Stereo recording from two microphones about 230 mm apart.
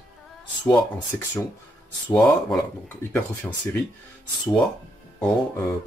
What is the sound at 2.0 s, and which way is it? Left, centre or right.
A man's voice, centre.